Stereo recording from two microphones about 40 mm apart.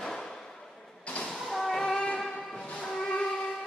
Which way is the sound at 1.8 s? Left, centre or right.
Centre.